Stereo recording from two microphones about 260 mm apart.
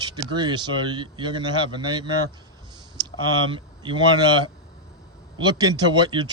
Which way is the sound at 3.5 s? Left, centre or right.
Centre.